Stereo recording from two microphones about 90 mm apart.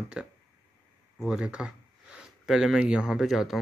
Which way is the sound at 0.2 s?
10° right (ahead or behind).